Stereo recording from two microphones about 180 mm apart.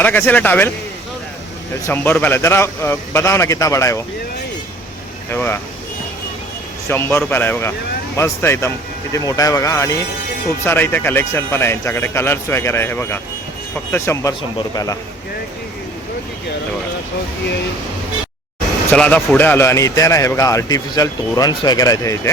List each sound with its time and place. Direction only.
0.0 s a man's voice: 10° left (ahead or behind)
1.9 s a man's voice: 10° left (ahead or behind)
5.3 s a man's voice: 10° left (ahead or behind)
6.8 s a man's voice: 15° left (ahead or behind)
18.9 s a man's voice: 10° left (ahead or behind)